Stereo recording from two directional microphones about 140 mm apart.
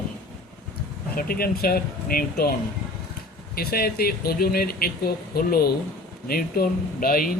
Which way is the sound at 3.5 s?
90° left.